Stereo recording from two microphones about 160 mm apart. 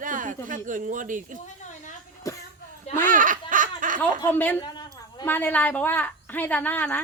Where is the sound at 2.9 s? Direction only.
55° right (ahead or behind).